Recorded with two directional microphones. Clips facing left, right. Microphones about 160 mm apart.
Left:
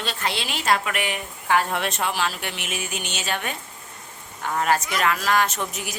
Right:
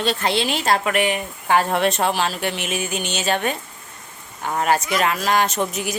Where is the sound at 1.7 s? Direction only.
35° right (ahead or behind).